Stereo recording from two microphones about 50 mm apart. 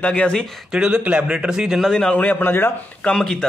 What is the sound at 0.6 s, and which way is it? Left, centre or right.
Speech, centre.